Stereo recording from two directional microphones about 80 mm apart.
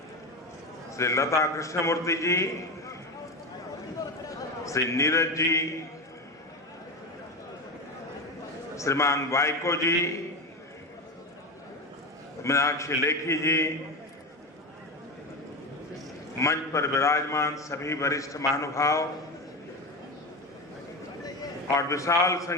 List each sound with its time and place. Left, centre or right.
0.9 s a man's voice: left
4.3 s a man's voice: left
8.7 s a man's voice: left
12.4 s a man's voice: left
16.4 s a man's voice: left
21.8 s a man's voice: left